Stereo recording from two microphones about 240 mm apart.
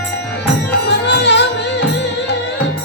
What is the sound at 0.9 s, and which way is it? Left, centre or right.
Music, left.